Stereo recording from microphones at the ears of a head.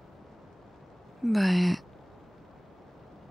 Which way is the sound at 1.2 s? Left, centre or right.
Centre.